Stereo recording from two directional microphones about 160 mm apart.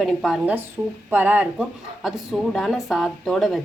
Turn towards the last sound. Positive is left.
turn(degrees=0)  # may be behind; listen again after turning